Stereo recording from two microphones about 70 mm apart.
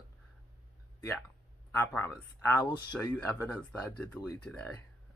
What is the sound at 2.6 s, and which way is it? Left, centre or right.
Speech, left.